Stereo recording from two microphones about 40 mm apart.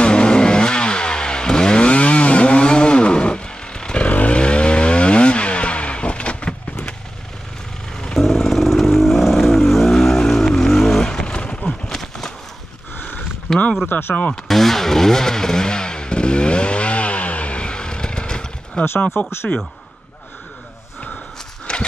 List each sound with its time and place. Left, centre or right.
0.0 s chainsaw: left
4.0 s vehicle: left
4.4 s vehicle: left
8.2 s vehicle: centre
11.1 s vehicle: left
11.9 s a sound: centre
13.8 s speech: left
14.5 s vehicle: centre; by 18.5 s left
18.8 s speech: left
19.1 s speech: left
21.7 s horse: left